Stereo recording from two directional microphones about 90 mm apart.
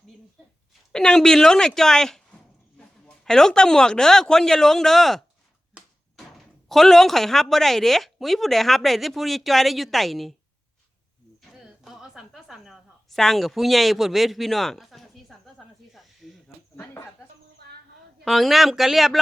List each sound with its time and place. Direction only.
0.9 s speech: 10° left (ahead or behind)
11.4 s a sound: 5° right (ahead or behind)
16.7 s snake: 25° left (ahead or behind)
18.3 s speech: centre (ahead or behind)